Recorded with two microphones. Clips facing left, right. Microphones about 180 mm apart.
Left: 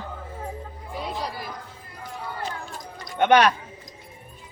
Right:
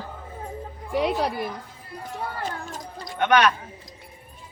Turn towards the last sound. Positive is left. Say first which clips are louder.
# left 2 dB
turn(degrees=30)  # may be behind; listen again after turning